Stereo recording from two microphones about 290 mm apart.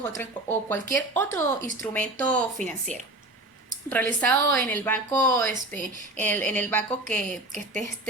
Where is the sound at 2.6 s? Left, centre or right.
Right.